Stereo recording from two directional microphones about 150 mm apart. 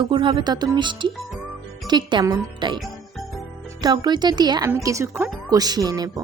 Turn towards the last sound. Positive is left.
turn(degrees=-25)  # may be behind; listen again after turning